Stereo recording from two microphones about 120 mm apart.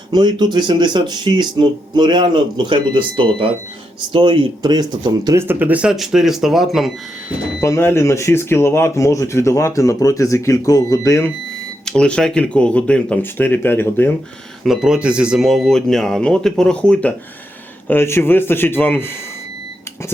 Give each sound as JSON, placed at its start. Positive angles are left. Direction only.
{"t": 0.1, "sound": "speech", "side_deg": -35}
{"t": 5.4, "sound": "speech", "side_deg": -15}
{"t": 7.6, "sound": "speech", "side_deg": 20}
{"t": 11.9, "sound": "speech", "side_deg": 5}
{"t": 14.6, "sound": "speech", "side_deg": -5}